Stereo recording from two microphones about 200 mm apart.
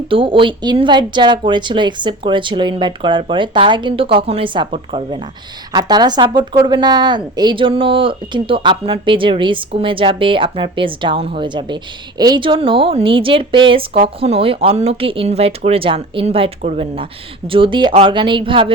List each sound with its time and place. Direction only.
0.1 s a woman's voice: 25° right (ahead or behind)